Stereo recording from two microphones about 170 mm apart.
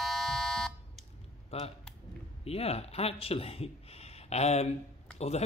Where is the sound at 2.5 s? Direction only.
35° left (ahead or behind).